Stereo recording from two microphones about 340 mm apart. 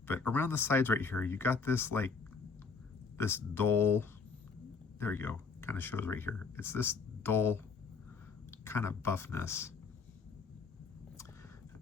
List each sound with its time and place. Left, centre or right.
0.1 s speech: centre
3.2 s speech: centre